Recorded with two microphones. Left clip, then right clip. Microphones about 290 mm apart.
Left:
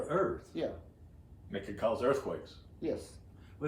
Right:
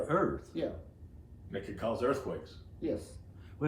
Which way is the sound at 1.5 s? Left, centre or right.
Left.